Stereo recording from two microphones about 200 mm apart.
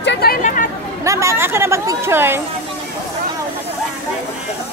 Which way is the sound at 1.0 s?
15° right (ahead or behind).